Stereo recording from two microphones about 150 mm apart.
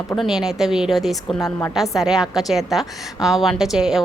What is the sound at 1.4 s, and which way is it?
Speech, 15° left (ahead or behind).